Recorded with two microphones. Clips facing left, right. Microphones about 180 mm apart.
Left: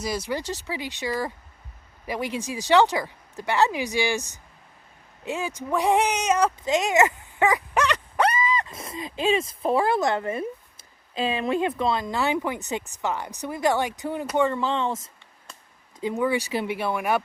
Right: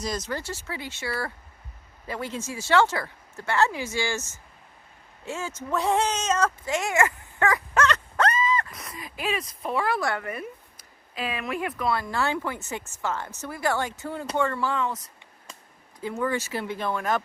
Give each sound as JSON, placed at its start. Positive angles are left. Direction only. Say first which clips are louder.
{"t": 0.0, "sound": "speech", "louder": "left 3 dB", "side_deg": 10}
{"t": 8.7, "sound": "speech", "louder": "left 6 dB", "side_deg": 25}